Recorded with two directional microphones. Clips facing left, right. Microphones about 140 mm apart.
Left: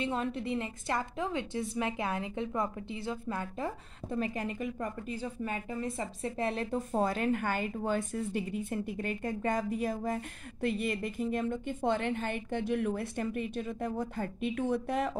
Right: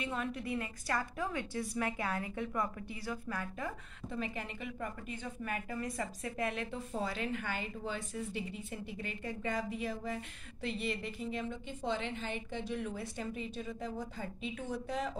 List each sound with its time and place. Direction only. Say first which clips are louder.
0.0 s a woman's voice: left 5 dB; 30° left (ahead or behind)
4.1 s a woman's voice: left 6 dB; 40° left (ahead or behind); by 15.1 s 60° left (ahead or behind)